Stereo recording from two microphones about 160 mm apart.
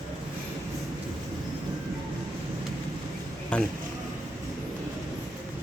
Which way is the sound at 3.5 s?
5° left (ahead or behind).